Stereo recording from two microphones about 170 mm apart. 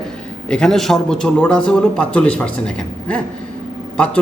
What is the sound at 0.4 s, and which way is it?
A man's voice, 5° left (ahead or behind).